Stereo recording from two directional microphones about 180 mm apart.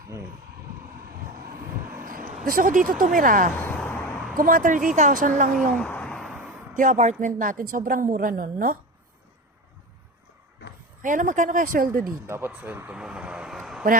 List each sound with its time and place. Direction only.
2.0 s a sound: 50° right (ahead or behind)
3.0 s a woman's voice: 50° right (ahead or behind)
3.5 s vehicle: 10° left (ahead or behind)
4.4 s a woman's voice: 50° right (ahead or behind)
5.7 s a sound: 5° left (ahead or behind)
6.7 s a woman's voice: 45° right (ahead or behind)
11.0 s a woman's voice: 45° right (ahead or behind)
12.3 s a man's voice: 10° right (ahead or behind)